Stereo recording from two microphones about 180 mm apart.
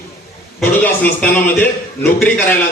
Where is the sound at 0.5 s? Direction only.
10° left (ahead or behind).